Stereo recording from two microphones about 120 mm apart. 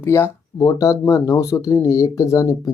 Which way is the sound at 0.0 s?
25° left (ahead or behind).